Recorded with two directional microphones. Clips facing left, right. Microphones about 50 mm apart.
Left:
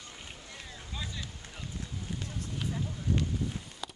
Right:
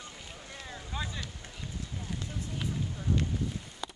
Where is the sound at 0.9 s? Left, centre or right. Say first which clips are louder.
Right 3 dB; right.